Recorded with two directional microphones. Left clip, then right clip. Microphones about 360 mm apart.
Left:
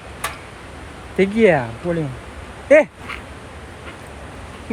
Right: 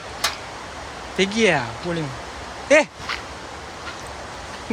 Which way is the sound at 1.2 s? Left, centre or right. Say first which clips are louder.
Left 4 dB; centre.